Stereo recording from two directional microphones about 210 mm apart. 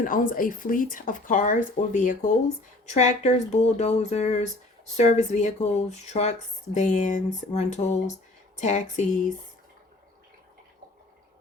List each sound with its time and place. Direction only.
0.0 s speech: 40° left (ahead or behind)